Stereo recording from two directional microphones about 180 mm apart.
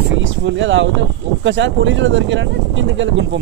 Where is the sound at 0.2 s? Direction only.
90° right.